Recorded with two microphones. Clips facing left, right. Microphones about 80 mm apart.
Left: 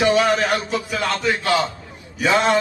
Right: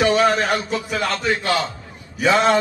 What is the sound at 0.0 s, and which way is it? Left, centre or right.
A man's voice, right.